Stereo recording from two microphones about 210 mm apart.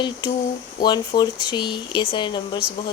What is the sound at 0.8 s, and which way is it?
Speech, 20° left (ahead or behind).